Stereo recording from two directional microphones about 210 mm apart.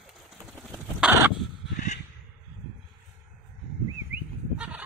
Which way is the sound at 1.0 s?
5° right (ahead or behind).